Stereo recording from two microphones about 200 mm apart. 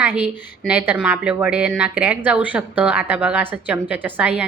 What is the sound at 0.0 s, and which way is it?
A woman's voice, 10° right (ahead or behind).